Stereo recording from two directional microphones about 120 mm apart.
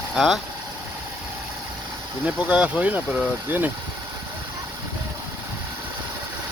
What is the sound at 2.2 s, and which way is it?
Speech, 10° right (ahead or behind).